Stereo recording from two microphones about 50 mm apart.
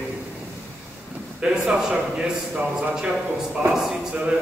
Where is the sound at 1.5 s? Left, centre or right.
Centre.